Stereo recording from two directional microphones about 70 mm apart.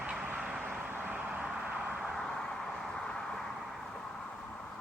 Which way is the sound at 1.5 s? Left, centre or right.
Centre.